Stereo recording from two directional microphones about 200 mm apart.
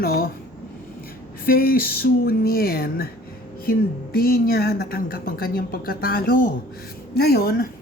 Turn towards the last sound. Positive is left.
turn(degrees=50)  # may be behind; listen again after turning